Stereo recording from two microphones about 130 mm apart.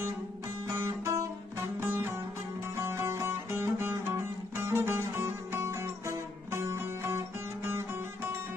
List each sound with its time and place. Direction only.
0.7 s music: 25° right (ahead or behind)